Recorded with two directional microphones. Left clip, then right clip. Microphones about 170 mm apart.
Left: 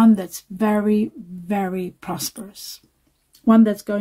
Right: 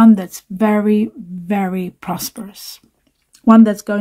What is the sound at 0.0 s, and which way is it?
Speech, 20° right (ahead or behind).